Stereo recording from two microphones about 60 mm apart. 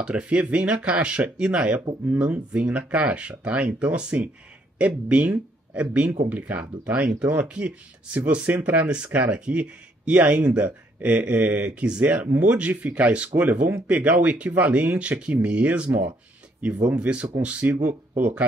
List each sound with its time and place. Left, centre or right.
0.0 s speech: centre
16.9 s speech: right